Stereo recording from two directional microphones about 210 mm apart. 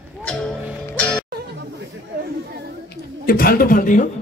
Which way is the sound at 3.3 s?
45° left (ahead or behind).